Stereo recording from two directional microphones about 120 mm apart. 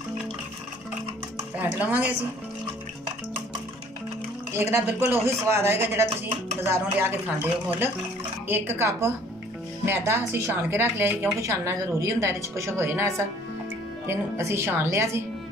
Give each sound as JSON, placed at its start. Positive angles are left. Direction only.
{"t": 1.6, "sound": "speech", "side_deg": -15}
{"t": 4.6, "sound": "a woman's voice", "side_deg": -25}